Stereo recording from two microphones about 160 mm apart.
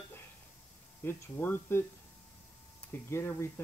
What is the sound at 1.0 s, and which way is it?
Speech, 15° left (ahead or behind).